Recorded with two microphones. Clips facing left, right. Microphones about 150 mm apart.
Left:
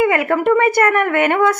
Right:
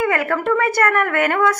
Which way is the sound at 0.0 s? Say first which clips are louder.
Left 4 dB; 20° left (ahead or behind).